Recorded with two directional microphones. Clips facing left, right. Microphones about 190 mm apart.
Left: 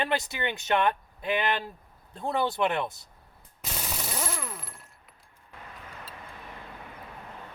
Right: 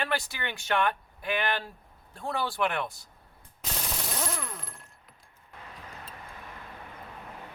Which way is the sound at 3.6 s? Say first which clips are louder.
Even; 5° left (ahead or behind).